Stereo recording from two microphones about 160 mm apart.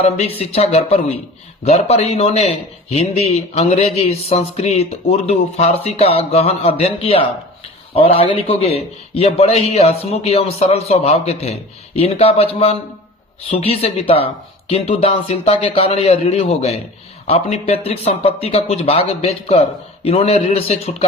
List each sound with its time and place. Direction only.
0.3 s speech: 40° left (ahead or behind)
13.5 s speech: 40° left (ahead or behind)